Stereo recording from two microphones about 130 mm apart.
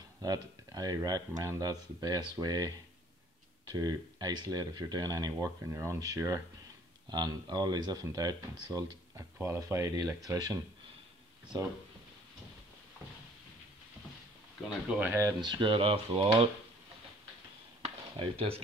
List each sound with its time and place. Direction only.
0.2 s speech: 30° right (ahead or behind)
3.7 s speech: 30° right (ahead or behind)
7.1 s speech: 35° right (ahead or behind)
14.9 s speech: 15° right (ahead or behind)
15.4 s speech: 35° right (ahead or behind)
17.8 s a sound: 45° right (ahead or behind)